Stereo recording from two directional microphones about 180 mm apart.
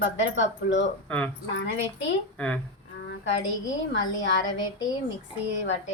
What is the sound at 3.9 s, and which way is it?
Speech, 80° left.